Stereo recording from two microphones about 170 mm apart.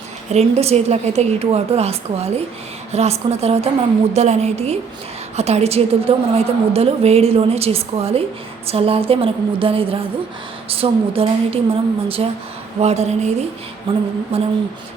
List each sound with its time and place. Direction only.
0.3 s a woman's voice: 40° right (ahead or behind)